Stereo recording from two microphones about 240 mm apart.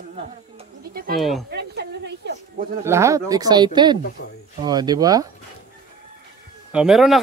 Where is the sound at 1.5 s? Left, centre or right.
Right.